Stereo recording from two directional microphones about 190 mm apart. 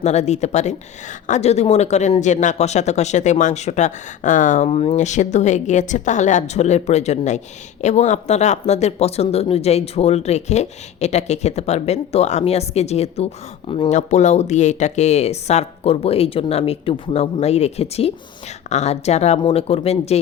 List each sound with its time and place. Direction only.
0.0 s speech: 35° left (ahead or behind)